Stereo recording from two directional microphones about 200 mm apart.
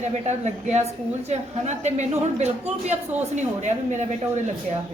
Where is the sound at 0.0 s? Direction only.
35° right (ahead or behind).